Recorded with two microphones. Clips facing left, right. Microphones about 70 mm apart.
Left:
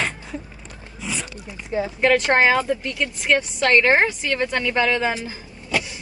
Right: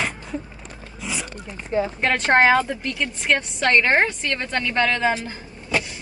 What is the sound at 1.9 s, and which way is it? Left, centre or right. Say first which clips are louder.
A woman's voice: left 2 dB; centre.